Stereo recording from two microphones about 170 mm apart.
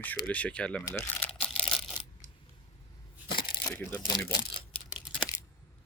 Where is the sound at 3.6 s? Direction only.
10° left (ahead or behind).